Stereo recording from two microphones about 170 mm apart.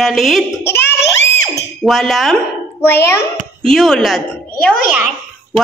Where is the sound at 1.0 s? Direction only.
90° left.